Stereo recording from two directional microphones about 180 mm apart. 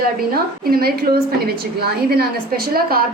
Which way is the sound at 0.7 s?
55° right (ahead or behind).